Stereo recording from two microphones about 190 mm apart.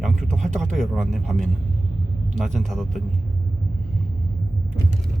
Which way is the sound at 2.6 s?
Centre (ahead or behind).